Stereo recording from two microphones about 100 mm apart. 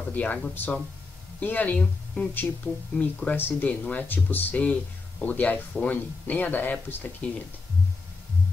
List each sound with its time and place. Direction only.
0.1 s speech: 15° left (ahead or behind)